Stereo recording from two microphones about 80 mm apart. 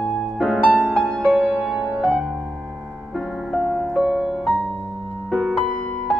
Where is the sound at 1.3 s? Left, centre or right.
Centre.